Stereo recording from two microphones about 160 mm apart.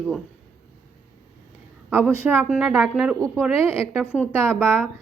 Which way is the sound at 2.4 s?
5° right (ahead or behind).